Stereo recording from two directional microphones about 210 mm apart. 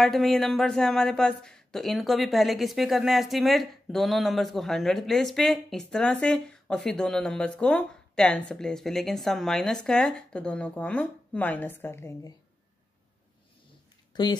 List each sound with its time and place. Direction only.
0.0 s speech: centre (ahead or behind)
14.1 s speech: 20° left (ahead or behind)